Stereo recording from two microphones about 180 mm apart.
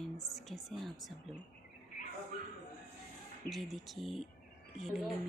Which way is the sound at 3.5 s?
Centre (ahead or behind).